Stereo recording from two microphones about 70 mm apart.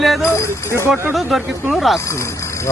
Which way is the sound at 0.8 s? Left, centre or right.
Right.